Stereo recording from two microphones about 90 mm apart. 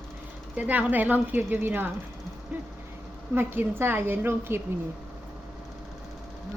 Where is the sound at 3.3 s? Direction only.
25° right (ahead or behind).